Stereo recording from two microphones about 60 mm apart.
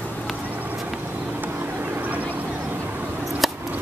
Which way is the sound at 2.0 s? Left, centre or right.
Right.